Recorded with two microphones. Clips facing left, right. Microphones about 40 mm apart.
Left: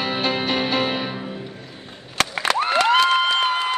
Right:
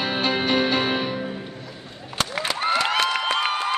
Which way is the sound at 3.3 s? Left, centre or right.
Right.